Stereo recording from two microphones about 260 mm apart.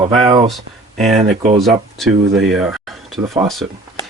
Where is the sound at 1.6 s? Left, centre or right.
Centre.